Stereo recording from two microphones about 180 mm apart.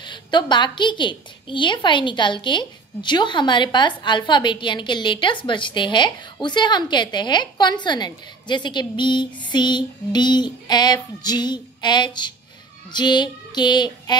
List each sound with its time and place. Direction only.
0.0 s a woman's voice: 25° left (ahead or behind)